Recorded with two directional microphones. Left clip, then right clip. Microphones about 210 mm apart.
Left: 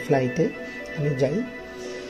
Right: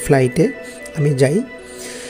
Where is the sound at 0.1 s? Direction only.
45° right (ahead or behind).